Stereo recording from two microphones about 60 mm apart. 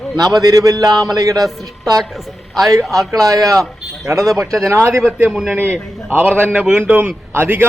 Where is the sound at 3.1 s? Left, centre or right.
Right.